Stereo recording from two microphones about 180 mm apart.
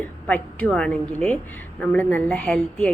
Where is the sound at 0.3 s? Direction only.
5° left (ahead or behind).